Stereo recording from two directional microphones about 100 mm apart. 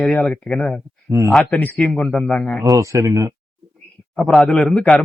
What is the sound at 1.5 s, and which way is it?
Speech, 15° left (ahead or behind).